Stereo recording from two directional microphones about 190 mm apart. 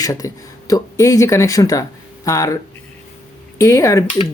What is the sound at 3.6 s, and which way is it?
Speech, 15° left (ahead or behind).